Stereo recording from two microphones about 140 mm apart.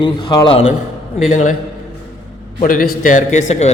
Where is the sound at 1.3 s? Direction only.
65° left (ahead or behind).